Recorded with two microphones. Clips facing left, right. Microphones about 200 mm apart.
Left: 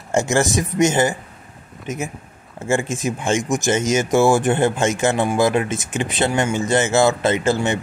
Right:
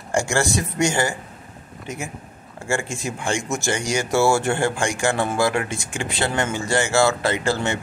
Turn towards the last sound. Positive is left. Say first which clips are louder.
# left 4 dB
turn(degrees=20)  # may be behind; listen again after turning